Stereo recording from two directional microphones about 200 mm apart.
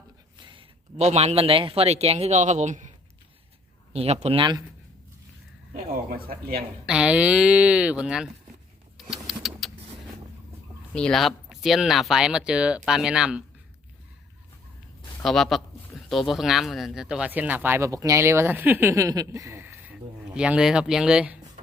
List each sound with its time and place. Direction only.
0.3 s a man's voice: 25° right (ahead or behind)
3.9 s speech: 30° right (ahead or behind)
5.7 s speech: 45° right (ahead or behind)
6.8 s speech: 5° right (ahead or behind)
9.0 s vehicle: centre (ahead or behind)
10.9 s speech: 5° left (ahead or behind)
15.2 s speech: centre (ahead or behind)